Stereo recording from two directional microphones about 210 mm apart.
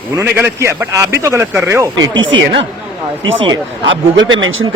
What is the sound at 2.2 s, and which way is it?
A man's voice, 65° right (ahead or behind).